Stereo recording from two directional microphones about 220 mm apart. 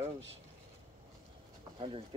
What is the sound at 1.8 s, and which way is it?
Speech, 25° right (ahead or behind).